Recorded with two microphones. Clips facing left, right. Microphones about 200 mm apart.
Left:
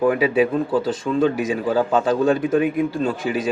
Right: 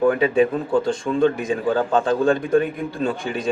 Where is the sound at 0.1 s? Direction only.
5° left (ahead or behind).